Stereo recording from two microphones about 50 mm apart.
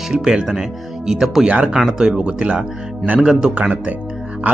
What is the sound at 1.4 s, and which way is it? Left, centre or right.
Speech, right.